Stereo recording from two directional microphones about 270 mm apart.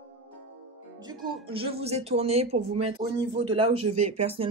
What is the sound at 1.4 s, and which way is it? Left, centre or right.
Speech, centre.